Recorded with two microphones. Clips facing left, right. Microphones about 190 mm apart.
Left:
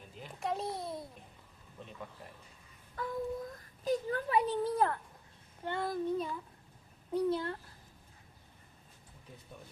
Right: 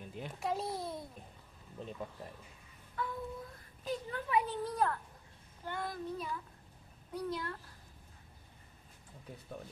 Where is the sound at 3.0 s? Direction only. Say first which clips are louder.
Left 4 dB; 40° left (ahead or behind).